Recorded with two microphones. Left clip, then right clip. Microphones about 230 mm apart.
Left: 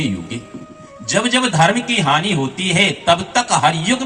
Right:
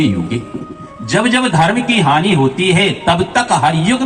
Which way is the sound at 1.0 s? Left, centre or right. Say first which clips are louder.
Right 3 dB; left.